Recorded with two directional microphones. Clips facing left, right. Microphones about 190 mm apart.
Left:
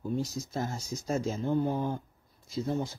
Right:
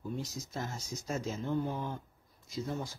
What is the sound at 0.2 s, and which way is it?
Speech, 35° left (ahead or behind).